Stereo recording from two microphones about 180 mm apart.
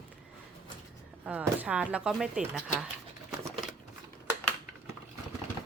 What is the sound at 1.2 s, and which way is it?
Speech, 10° right (ahead or behind).